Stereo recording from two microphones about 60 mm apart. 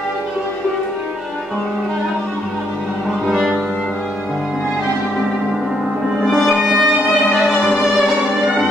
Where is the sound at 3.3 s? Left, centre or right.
Centre.